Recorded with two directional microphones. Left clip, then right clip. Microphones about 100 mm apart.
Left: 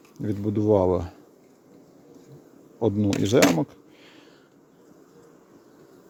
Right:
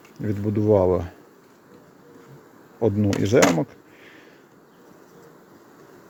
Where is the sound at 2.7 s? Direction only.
20° left (ahead or behind).